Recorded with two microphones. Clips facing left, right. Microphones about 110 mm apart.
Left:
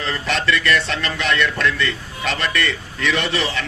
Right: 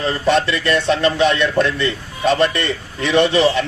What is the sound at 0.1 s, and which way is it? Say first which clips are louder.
Speech: right 4 dB; 30° right (ahead or behind).